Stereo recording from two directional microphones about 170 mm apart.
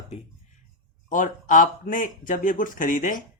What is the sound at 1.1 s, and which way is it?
Speech, 50° left (ahead or behind).